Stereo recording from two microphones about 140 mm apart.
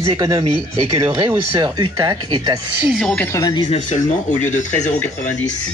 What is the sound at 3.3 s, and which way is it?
Speech, 30° left (ahead or behind).